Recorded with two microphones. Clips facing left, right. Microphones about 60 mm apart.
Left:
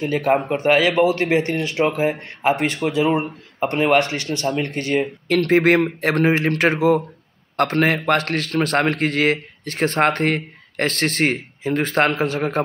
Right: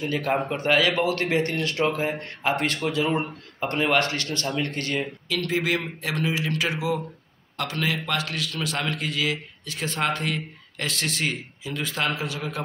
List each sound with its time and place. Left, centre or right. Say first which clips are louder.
0.1 s speech: left 7 dB; left
5.3 s a man's voice: left 10 dB; left